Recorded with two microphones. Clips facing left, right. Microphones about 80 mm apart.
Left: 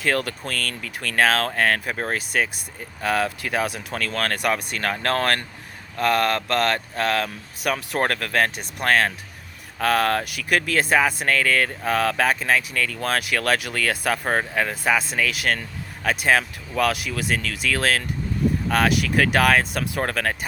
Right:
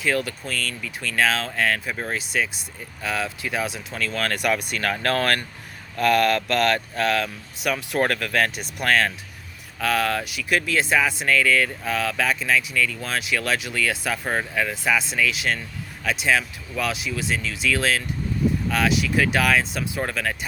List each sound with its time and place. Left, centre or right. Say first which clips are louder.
0.0 s speech: left 1 dB; left